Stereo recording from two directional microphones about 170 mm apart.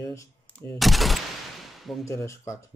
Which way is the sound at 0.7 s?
Centre (ahead or behind).